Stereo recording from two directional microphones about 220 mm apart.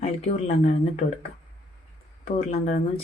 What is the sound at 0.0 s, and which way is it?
Speech, 35° left (ahead or behind).